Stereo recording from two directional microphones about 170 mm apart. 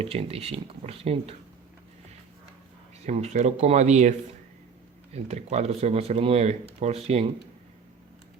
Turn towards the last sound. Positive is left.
turn(degrees=-40)  # may be behind; listen again after turning